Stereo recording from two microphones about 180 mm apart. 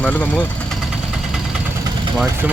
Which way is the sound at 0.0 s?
10° left (ahead or behind).